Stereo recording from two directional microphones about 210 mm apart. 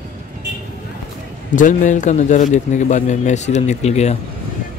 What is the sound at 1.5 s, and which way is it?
A man's voice, 40° left (ahead or behind).